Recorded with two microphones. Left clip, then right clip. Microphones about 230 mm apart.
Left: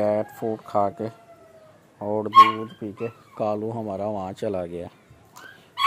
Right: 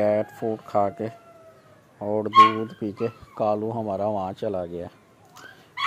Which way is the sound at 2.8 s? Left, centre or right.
Right.